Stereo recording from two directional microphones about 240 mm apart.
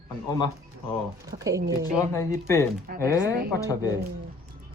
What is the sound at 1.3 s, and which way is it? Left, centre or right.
Speech, right.